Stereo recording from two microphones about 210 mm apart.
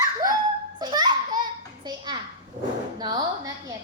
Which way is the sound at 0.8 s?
20° right (ahead or behind).